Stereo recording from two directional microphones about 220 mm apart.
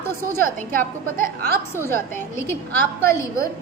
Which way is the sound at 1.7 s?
10° left (ahead or behind).